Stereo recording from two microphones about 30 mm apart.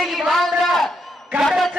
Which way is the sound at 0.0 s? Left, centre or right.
Centre.